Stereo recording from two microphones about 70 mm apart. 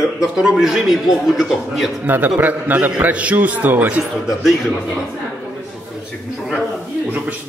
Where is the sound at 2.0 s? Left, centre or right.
Right.